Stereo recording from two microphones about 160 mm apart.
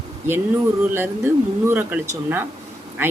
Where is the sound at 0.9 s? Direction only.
15° right (ahead or behind).